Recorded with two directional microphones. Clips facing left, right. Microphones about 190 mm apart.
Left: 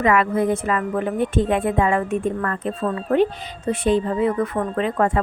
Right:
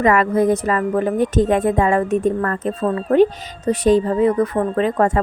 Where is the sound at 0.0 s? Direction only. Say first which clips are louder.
Right 3 dB; 40° right (ahead or behind).